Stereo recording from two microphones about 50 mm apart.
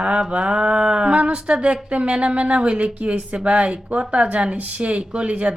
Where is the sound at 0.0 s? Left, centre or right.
Right.